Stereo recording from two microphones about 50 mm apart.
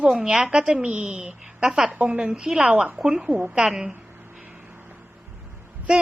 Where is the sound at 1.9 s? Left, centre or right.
Right.